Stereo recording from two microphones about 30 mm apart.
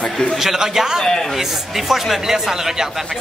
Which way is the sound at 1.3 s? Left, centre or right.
Centre.